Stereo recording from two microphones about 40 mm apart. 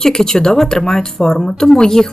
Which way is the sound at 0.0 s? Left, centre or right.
Centre.